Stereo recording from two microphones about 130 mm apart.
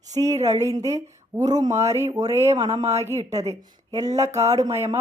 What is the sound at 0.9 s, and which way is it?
Speech, 30° right (ahead or behind).